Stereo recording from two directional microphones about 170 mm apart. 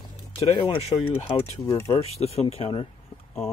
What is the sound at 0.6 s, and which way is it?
Speech, 30° left (ahead or behind).